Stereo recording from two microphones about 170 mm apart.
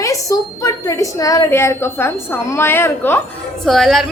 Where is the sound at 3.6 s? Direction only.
Centre (ahead or behind).